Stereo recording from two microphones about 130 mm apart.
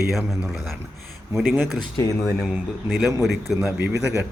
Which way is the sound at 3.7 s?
15° right (ahead or behind).